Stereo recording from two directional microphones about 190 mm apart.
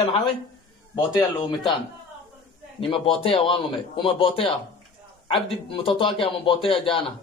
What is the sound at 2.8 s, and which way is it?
A man's voice, 30° left (ahead or behind).